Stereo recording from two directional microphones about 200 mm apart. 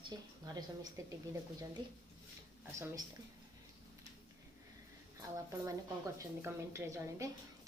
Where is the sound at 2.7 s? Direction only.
15° right (ahead or behind).